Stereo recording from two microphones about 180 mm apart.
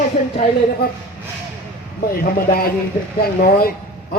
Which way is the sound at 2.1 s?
55° left (ahead or behind).